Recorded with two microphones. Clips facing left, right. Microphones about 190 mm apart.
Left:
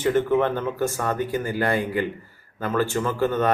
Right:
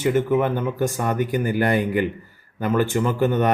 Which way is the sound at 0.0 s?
10° right (ahead or behind).